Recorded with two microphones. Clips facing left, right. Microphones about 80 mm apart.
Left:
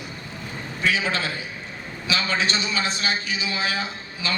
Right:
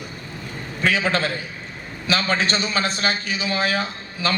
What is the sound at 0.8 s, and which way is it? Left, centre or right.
A man's voice, right.